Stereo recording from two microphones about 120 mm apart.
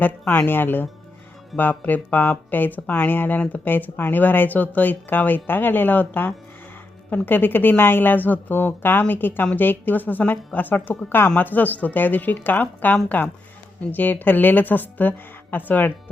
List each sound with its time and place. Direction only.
0.0 s speech: 15° left (ahead or behind)